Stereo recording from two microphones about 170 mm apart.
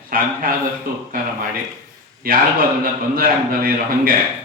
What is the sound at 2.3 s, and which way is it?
A man's voice, 60° right (ahead or behind).